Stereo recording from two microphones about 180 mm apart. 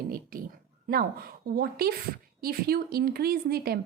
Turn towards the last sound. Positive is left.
turn(degrees=-60)  # may be behind; listen again after turning